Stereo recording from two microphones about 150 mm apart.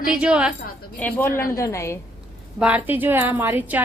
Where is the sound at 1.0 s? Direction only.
10° left (ahead or behind).